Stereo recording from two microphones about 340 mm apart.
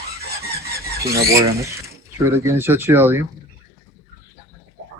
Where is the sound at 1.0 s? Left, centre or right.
Right.